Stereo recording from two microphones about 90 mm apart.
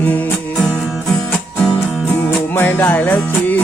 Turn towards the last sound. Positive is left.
turn(degrees=20)  # may be behind; listen again after turning